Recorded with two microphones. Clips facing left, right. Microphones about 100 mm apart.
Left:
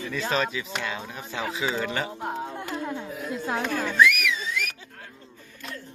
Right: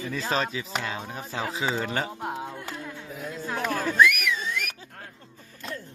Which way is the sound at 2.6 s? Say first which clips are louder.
Left 5 dB; 30° left (ahead or behind).